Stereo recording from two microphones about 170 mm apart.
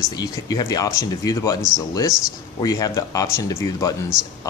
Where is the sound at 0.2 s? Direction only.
20° left (ahead or behind).